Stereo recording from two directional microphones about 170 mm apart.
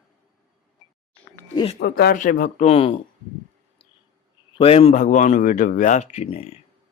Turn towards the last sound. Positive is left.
turn(degrees=40)  # may be behind; listen again after turning